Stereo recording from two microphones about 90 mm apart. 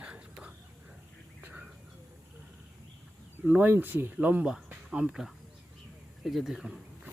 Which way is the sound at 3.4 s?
20° right (ahead or behind).